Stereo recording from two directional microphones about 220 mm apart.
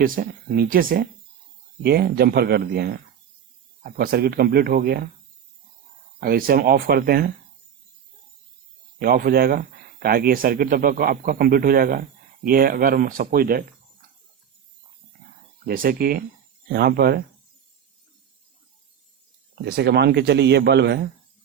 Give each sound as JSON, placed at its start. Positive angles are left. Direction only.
{"t": 0.0, "sound": "speech", "side_deg": -40}
{"t": 6.1, "sound": "speech", "side_deg": -40}
{"t": 9.0, "sound": "speech", "side_deg": -45}
{"t": 15.6, "sound": "speech", "side_deg": -40}
{"t": 19.6, "sound": "speech", "side_deg": -45}